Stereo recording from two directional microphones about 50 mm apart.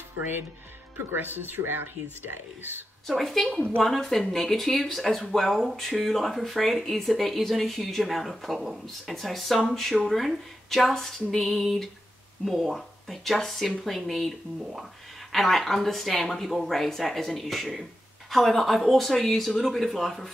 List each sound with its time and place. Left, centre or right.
0.2 s speech: right
3.1 s speech: centre
15.3 s speech: centre